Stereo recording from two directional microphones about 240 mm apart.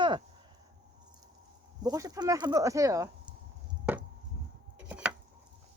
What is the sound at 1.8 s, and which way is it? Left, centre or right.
Speech, centre.